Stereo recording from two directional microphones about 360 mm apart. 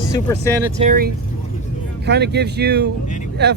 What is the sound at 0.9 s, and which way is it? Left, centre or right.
Speech, right.